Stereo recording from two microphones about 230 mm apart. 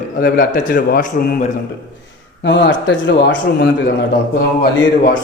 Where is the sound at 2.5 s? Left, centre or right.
Left.